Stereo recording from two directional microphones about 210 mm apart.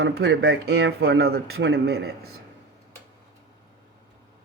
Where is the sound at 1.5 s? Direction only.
75° right (ahead or behind).